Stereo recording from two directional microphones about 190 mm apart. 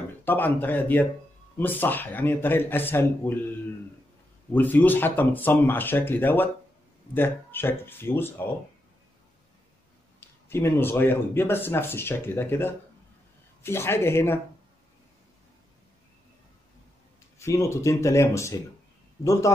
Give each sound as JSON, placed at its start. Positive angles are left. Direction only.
{"t": 0.2, "sound": "speech", "side_deg": 10}
{"t": 4.5, "sound": "speech", "side_deg": 10}
{"t": 10.5, "sound": "speech", "side_deg": 10}
{"t": 17.4, "sound": "speech", "side_deg": 15}